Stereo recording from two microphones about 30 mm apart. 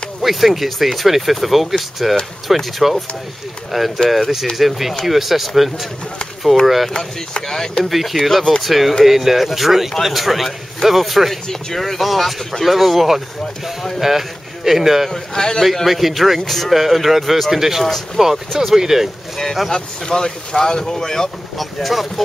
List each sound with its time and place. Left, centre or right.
0.2 s speech: centre
6.6 s speech: centre
7.4 s speech: centre
7.9 s a man's voice: centre
15.0 s speech: centre
15.6 s speech: centre
17.8 s speech: centre
18.7 s speech: centre
19.3 s speech: centre
19.7 s speech: left
21.5 s speech: centre